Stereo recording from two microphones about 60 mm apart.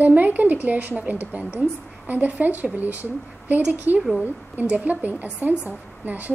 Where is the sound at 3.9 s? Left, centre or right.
Left.